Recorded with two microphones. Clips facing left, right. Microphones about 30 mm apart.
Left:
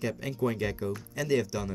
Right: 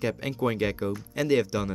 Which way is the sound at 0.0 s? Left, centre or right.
Right.